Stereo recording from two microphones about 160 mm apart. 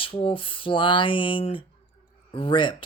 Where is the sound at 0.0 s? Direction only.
35° left (ahead or behind).